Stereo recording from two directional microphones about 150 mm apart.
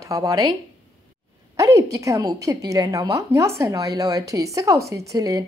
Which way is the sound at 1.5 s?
20° right (ahead or behind).